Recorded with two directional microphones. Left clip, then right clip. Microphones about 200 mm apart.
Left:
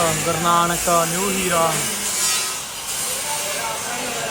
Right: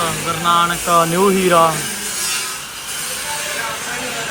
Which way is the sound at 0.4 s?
25° left (ahead or behind).